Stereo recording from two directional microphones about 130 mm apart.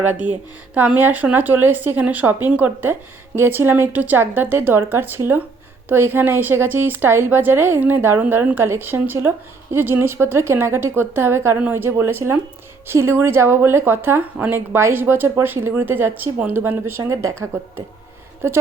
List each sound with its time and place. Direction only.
0.0 s a woman's voice: 10° right (ahead or behind)
18.4 s a woman's voice: 20° right (ahead or behind)